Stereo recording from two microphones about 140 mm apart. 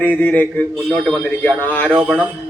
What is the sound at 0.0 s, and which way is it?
Speech, 10° left (ahead or behind).